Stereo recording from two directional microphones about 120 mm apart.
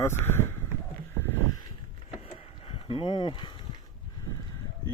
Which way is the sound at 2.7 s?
50° left (ahead or behind).